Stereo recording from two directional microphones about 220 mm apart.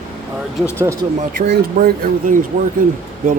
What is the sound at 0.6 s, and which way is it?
Speech, 10° right (ahead or behind).